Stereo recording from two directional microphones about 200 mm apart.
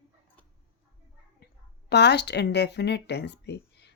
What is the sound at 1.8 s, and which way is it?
Speech, 55° left (ahead or behind).